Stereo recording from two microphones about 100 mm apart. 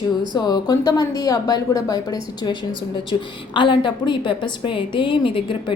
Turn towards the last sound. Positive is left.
turn(degrees=55)  # may be behind; listen again after turning